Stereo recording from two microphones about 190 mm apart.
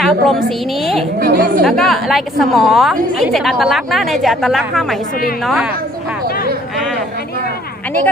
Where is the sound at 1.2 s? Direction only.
50° right (ahead or behind).